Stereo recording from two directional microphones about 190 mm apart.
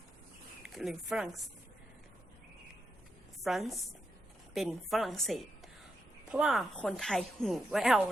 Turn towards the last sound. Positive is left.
turn(degrees=0)  # may be behind; listen again after turning